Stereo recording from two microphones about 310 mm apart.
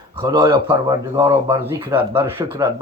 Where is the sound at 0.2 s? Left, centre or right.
Centre.